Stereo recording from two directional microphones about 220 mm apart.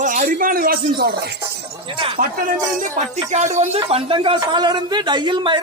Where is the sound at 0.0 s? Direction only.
40° right (ahead or behind).